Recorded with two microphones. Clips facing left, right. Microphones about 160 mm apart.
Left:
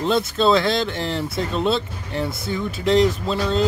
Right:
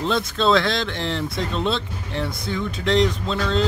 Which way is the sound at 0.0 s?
5° left (ahead or behind).